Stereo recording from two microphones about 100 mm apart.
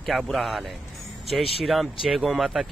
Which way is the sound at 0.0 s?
Centre (ahead or behind).